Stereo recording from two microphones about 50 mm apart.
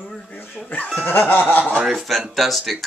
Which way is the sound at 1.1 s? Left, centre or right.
Left.